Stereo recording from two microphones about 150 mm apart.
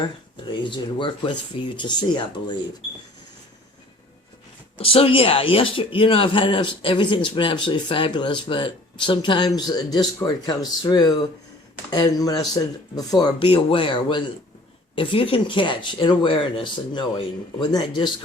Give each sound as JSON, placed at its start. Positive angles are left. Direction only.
{"t": 0.3, "sound": "speech", "side_deg": 30}
{"t": 4.8, "sound": "speech", "side_deg": 40}